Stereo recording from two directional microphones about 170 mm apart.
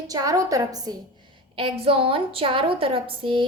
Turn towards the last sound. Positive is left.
turn(degrees=-30)  # may be behind; listen again after turning